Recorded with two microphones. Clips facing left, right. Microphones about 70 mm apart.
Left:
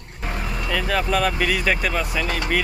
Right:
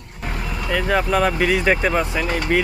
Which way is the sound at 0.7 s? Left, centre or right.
Centre.